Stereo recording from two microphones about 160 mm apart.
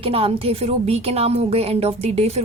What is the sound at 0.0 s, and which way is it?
A woman's voice, 35° right (ahead or behind).